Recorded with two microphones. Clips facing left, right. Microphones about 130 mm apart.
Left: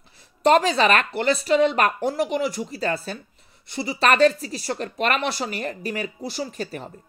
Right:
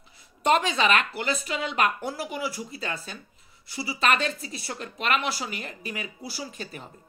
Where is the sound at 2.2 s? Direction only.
70° left (ahead or behind).